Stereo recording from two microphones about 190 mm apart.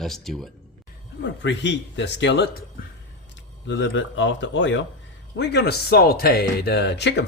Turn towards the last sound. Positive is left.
turn(degrees=65)  # may be behind; listen again after turning